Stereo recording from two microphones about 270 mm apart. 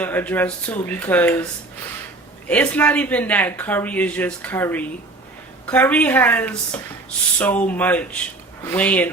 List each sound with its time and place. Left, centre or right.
0.0 s speech: centre
2.5 s speech: centre